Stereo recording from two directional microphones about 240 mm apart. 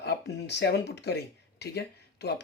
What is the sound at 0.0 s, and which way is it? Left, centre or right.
Speech, left.